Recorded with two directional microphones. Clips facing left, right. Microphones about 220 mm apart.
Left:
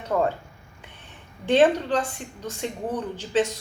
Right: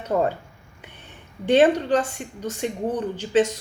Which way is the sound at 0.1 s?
25° right (ahead or behind).